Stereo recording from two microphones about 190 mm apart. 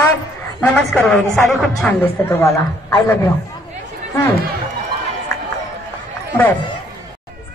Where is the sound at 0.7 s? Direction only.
10° left (ahead or behind).